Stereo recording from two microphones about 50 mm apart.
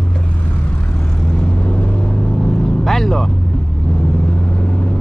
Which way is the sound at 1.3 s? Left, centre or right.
Left.